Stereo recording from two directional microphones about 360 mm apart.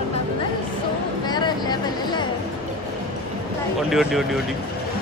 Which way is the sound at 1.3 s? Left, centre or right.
Centre.